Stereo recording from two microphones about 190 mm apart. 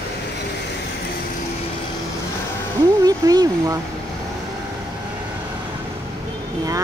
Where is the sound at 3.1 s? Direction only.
20° right (ahead or behind).